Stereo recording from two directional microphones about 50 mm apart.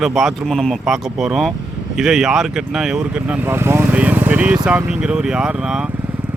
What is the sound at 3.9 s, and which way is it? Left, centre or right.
Speech, right.